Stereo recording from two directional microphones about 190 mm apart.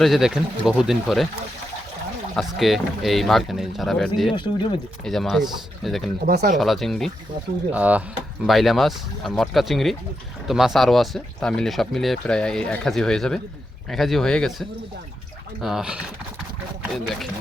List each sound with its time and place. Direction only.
0.0 s speech: centre (ahead or behind)
2.3 s speech: centre (ahead or behind)
6.2 s speech: 50° right (ahead or behind)
6.6 s speech: centre (ahead or behind)